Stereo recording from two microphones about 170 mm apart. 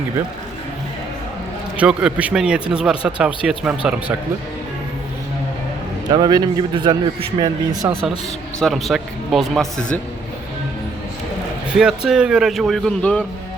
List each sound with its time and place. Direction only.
1.7 s speech: 5° right (ahead or behind)
6.1 s a man's voice: 25° right (ahead or behind)
8.6 s speech: centre (ahead or behind)
11.7 s speech: 5° right (ahead or behind)